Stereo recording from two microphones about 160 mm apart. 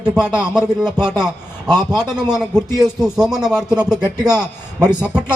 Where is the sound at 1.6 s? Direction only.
25° right (ahead or behind).